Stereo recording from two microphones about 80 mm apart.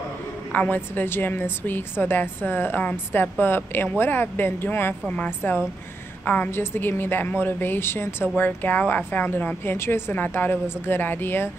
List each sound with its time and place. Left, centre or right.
0.5 s a woman's voice: left